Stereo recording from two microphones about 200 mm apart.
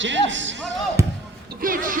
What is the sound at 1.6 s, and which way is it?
Music, 45° right (ahead or behind).